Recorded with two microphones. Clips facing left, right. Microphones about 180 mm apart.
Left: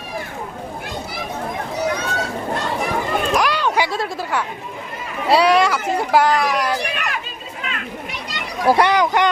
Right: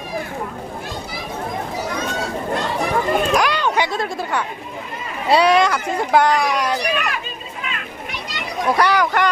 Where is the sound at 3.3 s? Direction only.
Centre (ahead or behind).